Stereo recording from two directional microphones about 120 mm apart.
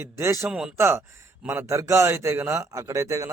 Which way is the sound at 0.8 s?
20° right (ahead or behind).